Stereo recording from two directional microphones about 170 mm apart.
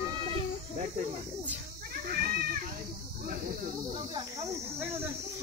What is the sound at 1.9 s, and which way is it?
Cat, 65° right (ahead or behind).